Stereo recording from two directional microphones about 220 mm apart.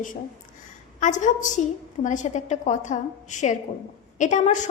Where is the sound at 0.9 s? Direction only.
35° left (ahead or behind).